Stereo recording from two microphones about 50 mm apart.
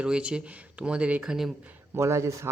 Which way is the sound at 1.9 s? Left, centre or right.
Right.